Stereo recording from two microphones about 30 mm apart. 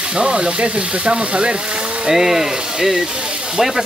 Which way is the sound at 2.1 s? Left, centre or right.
Centre.